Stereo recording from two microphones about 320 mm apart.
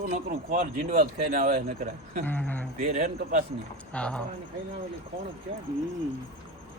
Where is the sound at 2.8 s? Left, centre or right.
Right.